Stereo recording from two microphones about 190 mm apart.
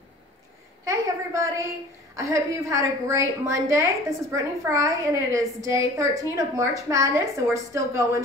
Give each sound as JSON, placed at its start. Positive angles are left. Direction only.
{"t": 0.8, "sound": "a woman's voice", "side_deg": -15}